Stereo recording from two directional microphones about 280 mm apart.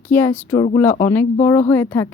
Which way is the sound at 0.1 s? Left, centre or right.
Centre.